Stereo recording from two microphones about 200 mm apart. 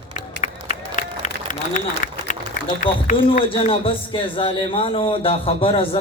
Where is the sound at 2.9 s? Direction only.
25° left (ahead or behind).